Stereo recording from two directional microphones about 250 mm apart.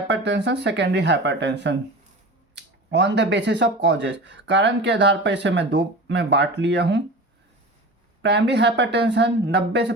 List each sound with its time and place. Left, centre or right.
0.1 s speech: right
8.2 s speech: right